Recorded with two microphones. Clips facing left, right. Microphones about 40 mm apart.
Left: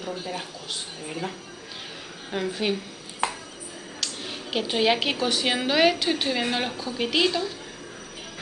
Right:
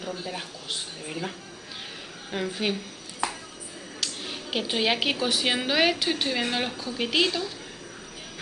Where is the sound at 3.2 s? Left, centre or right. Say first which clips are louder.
Left 2 dB; left.